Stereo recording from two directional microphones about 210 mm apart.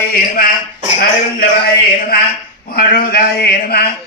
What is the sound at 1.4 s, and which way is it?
A man's voice, 45° left (ahead or behind).